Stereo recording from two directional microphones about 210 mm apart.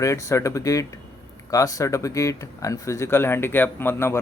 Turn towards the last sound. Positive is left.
turn(degrees=10)  # may be behind; listen again after turning